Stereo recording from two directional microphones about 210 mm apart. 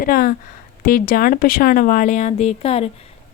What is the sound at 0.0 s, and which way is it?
A woman's voice, 40° left (ahead or behind).